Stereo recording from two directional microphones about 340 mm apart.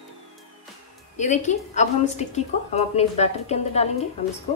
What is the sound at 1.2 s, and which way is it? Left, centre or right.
A woman's voice, left.